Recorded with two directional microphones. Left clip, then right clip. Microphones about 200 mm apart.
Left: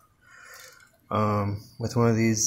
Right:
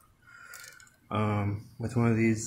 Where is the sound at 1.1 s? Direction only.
10° left (ahead or behind).